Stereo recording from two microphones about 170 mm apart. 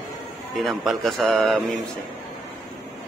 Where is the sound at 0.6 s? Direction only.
Centre (ahead or behind).